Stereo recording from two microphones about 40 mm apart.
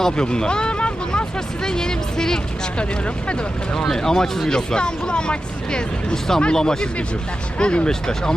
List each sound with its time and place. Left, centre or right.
0.0 s speech: centre
1.6 s speech: centre
3.9 s speech: centre